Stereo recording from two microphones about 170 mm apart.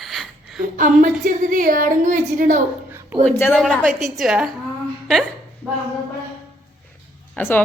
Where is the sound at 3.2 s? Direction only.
10° left (ahead or behind).